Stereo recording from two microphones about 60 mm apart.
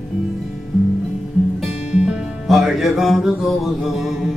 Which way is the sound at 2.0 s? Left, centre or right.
Centre.